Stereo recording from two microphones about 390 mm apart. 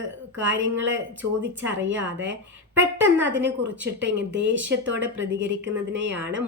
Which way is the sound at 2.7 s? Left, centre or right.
Centre.